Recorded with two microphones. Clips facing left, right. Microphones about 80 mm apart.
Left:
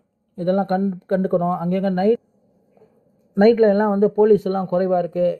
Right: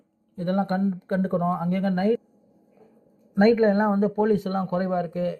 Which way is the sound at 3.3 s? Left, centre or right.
Left.